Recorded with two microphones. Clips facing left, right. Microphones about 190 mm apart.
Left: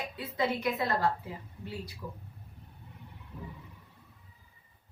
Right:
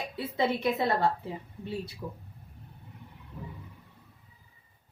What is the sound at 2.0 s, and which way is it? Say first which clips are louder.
Speech: right 3 dB; 25° right (ahead or behind).